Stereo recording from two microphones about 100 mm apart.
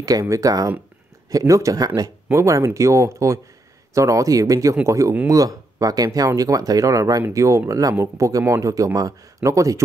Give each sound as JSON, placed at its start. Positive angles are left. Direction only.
{"t": 0.0, "sound": "speech", "side_deg": -35}